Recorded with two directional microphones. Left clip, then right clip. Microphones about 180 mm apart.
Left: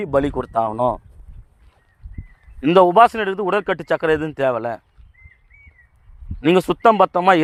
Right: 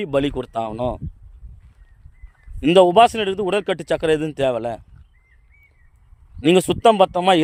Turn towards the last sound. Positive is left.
turn(degrees=-10)  # may be behind; listen again after turning